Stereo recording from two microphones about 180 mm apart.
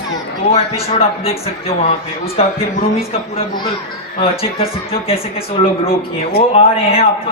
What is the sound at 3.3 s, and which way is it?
A man's voice, 25° left (ahead or behind).